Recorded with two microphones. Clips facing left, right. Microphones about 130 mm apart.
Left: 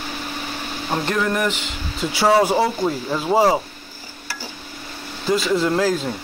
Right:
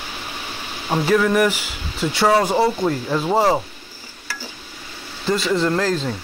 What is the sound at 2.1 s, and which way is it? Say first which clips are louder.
Speech: left 1 dB; 5° left (ahead or behind).